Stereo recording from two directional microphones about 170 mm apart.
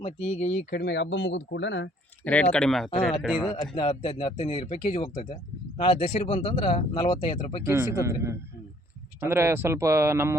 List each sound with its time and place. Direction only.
0.0 s speech: 40° left (ahead or behind)
0.7 s speech: 80° left
2.2 s speech: 10° left (ahead or behind)
3.8 s speech: 30° left (ahead or behind)
7.6 s speech: 15° right (ahead or behind)